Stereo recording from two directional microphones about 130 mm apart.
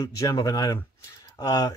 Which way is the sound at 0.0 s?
25° left (ahead or behind).